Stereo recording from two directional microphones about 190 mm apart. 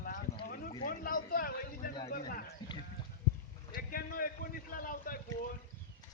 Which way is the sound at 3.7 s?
50° left (ahead or behind).